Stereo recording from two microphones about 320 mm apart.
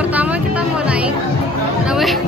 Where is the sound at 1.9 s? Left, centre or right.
Centre.